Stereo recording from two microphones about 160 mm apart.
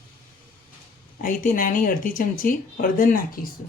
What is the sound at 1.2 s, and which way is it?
Speech, 55° left (ahead or behind).